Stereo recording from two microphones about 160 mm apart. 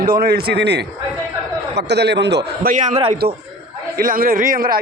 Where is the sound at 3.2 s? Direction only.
80° right.